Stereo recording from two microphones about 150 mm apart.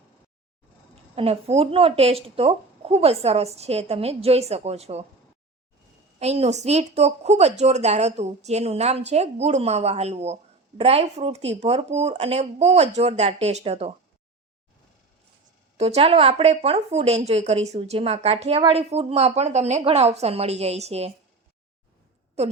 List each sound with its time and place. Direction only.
1.1 s a woman's voice: 40° right (ahead or behind)
6.1 s a woman's voice: 45° right (ahead or behind)
15.8 s a woman's voice: 40° right (ahead or behind)
22.4 s a woman's voice: 45° right (ahead or behind)